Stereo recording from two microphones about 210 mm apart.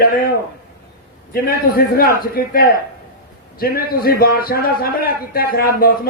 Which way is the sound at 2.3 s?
45° left (ahead or behind).